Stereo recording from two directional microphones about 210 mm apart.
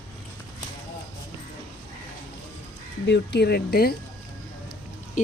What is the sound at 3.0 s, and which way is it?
Speech, 55° left (ahead or behind).